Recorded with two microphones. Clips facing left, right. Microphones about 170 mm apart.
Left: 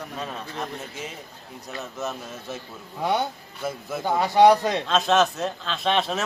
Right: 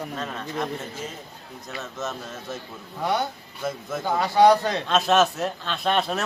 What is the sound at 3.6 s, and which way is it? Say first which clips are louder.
A man's voice: even; 10° left (ahead or behind).